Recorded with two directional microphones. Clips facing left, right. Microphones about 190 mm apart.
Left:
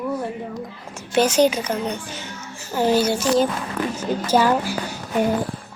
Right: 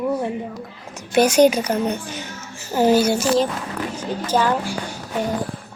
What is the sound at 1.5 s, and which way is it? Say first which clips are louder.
Speech: right 3 dB; 35° right (ahead or behind).